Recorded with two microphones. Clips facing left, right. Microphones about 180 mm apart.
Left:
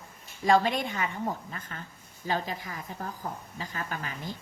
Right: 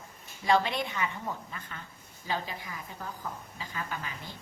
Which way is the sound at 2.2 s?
40° left (ahead or behind).